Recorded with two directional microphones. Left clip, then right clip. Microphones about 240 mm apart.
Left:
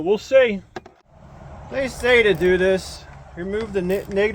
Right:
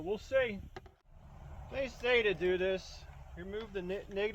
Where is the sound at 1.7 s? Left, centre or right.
Centre.